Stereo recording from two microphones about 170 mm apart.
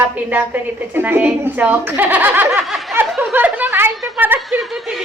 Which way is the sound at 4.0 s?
10° right (ahead or behind).